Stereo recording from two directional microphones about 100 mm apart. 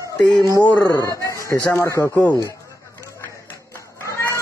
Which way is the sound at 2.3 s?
35° left (ahead or behind).